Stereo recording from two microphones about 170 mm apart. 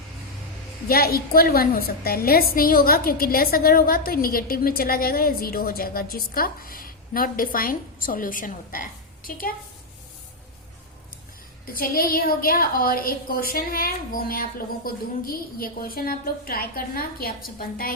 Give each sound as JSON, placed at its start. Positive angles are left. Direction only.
{"t": 0.9, "sound": "a woman's voice", "side_deg": 65}
{"t": 11.6, "sound": "a woman's voice", "side_deg": 60}